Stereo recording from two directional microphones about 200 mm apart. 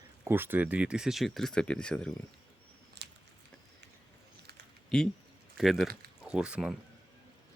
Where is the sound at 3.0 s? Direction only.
55° right (ahead or behind).